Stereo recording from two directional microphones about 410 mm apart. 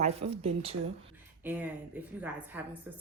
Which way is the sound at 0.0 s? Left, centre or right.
Centre.